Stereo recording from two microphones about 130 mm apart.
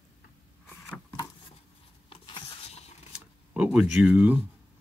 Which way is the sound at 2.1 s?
40° left (ahead or behind).